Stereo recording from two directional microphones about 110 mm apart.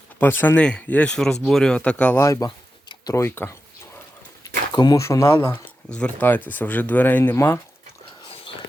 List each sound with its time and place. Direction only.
0.2 s speech: 20° left (ahead or behind)
2.2 s speech: 30° left (ahead or behind)
4.7 s speech: 40° left (ahead or behind)
5.0 s speech: 25° left (ahead or behind)
5.9 s speech: 10° left (ahead or behind)
8.2 s a sound: 55° left (ahead or behind)